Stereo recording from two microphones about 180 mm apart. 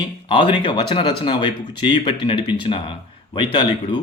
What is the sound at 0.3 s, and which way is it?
Speech, 30° left (ahead or behind).